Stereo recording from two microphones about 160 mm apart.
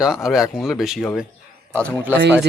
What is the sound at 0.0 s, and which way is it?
A man's voice, 5° right (ahead or behind).